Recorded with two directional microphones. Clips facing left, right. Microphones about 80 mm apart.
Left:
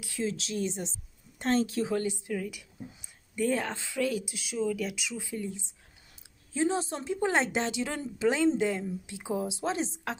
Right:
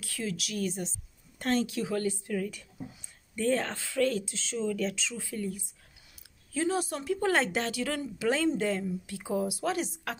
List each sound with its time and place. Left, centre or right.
0.0 s a woman's voice: left
2.3 s a woman's voice: centre; by 10.1 s left